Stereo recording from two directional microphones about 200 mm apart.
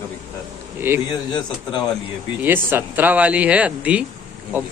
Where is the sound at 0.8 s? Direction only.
10° right (ahead or behind).